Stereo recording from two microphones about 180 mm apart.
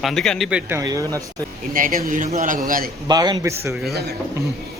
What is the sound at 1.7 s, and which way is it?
A man's voice, 50° right (ahead or behind).